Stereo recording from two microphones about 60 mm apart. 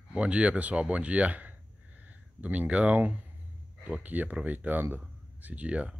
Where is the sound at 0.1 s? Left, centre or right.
Centre.